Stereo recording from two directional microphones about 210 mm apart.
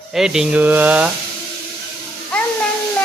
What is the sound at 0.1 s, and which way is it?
Speech, centre (ahead or behind).